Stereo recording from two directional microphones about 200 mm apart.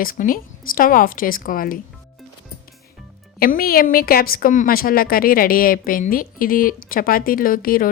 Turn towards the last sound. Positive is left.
turn(degrees=45)  # may be behind; listen again after turning